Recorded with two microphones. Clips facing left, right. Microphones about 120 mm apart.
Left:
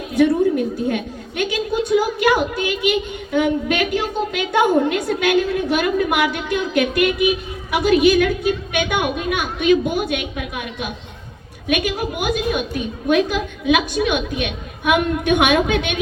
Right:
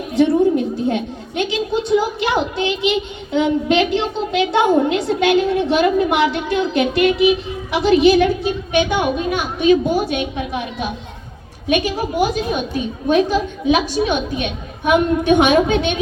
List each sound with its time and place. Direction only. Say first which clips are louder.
0.2 s a woman's voice: right 1 dB; 25° right (ahead or behind)